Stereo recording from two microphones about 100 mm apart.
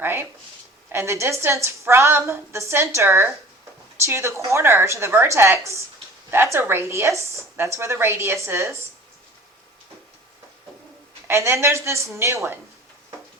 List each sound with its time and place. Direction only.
0.0 s a woman's voice: 20° right (ahead or behind)
11.3 s a woman's voice: 25° right (ahead or behind)